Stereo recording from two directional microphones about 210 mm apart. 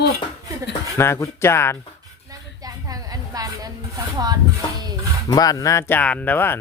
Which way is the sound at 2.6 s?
15° right (ahead or behind).